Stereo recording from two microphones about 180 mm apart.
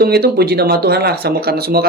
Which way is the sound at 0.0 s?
60° right (ahead or behind).